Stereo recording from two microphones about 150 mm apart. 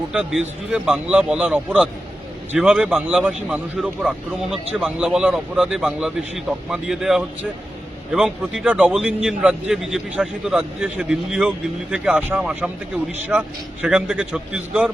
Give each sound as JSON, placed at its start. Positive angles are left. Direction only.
{"t": 0.1, "sound": "a man's voice", "side_deg": -5}